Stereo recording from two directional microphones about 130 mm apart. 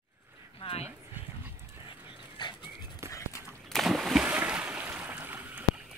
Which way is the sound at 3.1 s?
25° left (ahead or behind).